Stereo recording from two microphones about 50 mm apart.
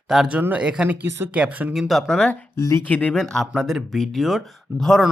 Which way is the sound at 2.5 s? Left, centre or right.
Left.